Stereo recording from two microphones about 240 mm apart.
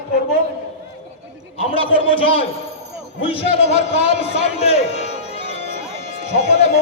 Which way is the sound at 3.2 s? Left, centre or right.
Left.